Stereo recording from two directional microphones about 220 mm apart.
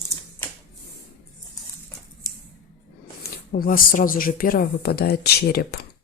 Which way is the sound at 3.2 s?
40° left (ahead or behind).